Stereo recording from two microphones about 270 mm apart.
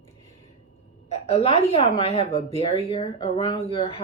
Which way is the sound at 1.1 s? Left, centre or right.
Left.